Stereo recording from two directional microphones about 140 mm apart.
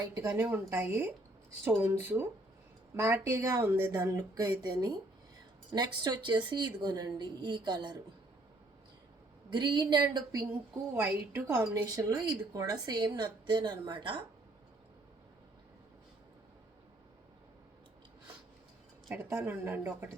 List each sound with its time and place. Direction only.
0.2 s a woman's voice: 20° right (ahead or behind)
9.5 s a woman's voice: 35° right (ahead or behind)
11.1 s speech: 15° right (ahead or behind); by 14.3 s 35° right (ahead or behind)
19.0 s speech: 20° right (ahead or behind)